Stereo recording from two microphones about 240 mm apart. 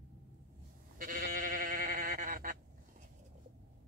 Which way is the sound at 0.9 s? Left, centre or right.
Right.